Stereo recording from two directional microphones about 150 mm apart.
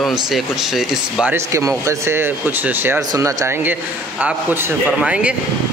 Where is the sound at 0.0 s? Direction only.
Centre (ahead or behind).